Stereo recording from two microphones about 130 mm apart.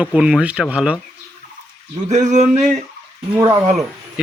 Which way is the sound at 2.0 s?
65° right (ahead or behind).